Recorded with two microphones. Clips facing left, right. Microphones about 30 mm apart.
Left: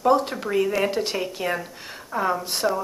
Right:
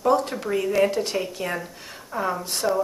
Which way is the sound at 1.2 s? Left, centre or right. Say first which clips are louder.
Left 1 dB; centre.